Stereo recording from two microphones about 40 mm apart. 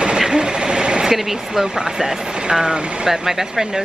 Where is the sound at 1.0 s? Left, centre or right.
Centre.